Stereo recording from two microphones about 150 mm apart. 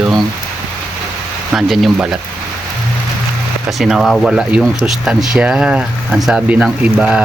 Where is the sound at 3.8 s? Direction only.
Centre (ahead or behind).